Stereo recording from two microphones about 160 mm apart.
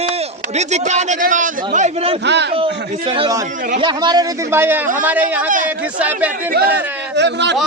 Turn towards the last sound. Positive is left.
turn(degrees=-90)